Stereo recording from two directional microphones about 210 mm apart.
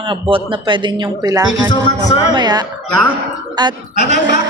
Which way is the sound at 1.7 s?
20° left (ahead or behind).